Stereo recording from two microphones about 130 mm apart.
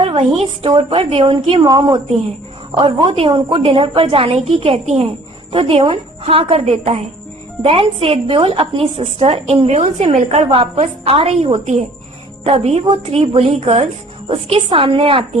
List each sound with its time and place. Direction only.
0.0 s a woman's voice: 45° right (ahead or behind)
1.6 s a woman's voice: 30° right (ahead or behind); by 11.6 s 50° right (ahead or behind)
11.6 s speech: 60° right (ahead or behind)
12.5 s a woman's voice: 50° right (ahead or behind)